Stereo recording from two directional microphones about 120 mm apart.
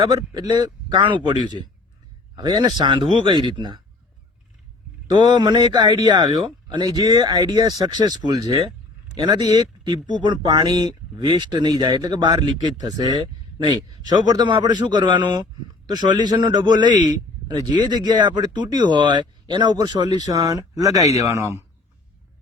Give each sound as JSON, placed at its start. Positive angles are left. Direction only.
{"t": 0.1, "sound": "speech", "side_deg": -35}
{"t": 5.0, "sound": "a man's voice", "side_deg": -35}